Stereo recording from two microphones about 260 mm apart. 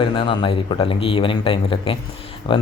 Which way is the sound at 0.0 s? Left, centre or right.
Centre.